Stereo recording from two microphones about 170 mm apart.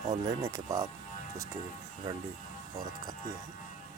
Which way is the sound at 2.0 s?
20° right (ahead or behind).